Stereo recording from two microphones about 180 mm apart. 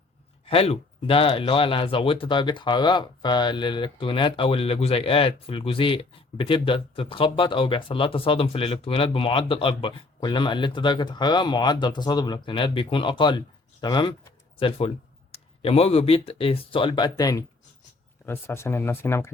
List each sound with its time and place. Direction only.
0.4 s speech: 35° left (ahead or behind); by 19.3 s 15° left (ahead or behind)